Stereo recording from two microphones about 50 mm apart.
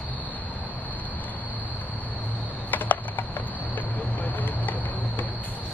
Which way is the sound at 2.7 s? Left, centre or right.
Left.